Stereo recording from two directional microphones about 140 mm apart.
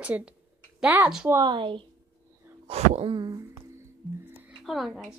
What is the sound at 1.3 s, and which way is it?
Speech, 30° right (ahead or behind).